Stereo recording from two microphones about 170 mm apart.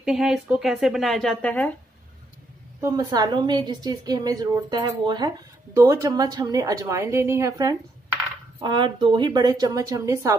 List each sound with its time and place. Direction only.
0.0 s speech: 5° right (ahead or behind)
2.8 s a woman's voice: 20° right (ahead or behind)
8.5 s a woman's voice: 30° right (ahead or behind)